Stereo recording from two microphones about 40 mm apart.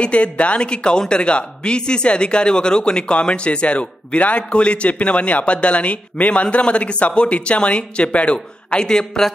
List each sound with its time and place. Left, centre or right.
0.0 s speech: left
8.8 s speech: centre